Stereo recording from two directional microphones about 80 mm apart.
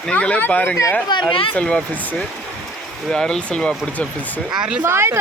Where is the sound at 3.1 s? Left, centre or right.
Centre.